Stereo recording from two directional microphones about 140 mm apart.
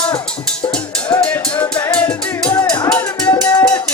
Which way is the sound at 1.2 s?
10° left (ahead or behind).